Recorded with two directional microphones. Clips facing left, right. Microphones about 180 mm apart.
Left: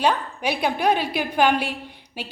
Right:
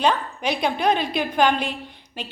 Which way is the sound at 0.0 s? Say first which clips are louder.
Even; 10° left (ahead or behind).